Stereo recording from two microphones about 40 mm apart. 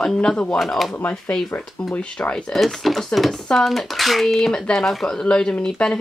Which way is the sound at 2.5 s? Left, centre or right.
Centre.